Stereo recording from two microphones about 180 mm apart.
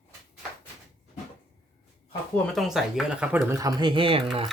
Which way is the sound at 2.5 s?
Centre (ahead or behind).